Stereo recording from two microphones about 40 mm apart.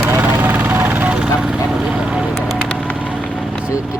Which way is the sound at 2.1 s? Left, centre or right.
Right.